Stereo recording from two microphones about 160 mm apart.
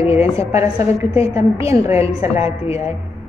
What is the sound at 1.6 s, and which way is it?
Speech, 20° right (ahead or behind).